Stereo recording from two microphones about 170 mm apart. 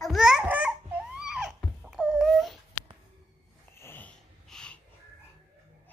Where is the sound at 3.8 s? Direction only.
10° left (ahead or behind).